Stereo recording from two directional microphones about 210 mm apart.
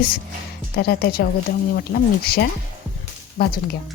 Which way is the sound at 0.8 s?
50° left (ahead or behind).